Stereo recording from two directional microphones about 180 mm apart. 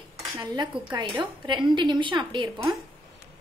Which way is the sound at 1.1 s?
25° right (ahead or behind).